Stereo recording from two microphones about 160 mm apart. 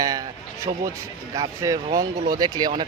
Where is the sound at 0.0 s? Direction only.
20° right (ahead or behind).